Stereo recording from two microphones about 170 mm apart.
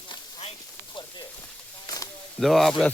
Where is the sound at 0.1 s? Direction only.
35° left (ahead or behind).